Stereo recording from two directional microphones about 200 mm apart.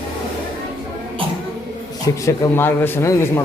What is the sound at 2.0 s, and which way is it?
Speech, 15° left (ahead or behind).